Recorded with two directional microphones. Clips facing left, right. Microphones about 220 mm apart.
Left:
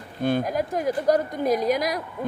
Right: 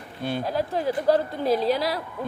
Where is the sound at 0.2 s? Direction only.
50° left (ahead or behind).